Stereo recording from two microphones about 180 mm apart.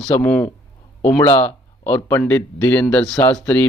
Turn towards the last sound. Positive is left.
turn(degrees=10)  # may be behind; listen again after turning